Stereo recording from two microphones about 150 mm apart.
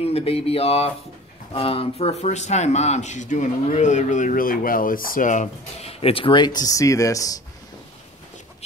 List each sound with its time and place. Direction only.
0.0 s speech: 40° left (ahead or behind); by 7.3 s 20° left (ahead or behind)